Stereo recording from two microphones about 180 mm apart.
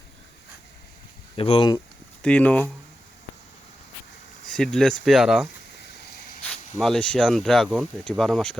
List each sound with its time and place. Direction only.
1.4 s speech: 30° left (ahead or behind)
2.2 s speech: 5° left (ahead or behind)
4.5 s speech: 5° left (ahead or behind)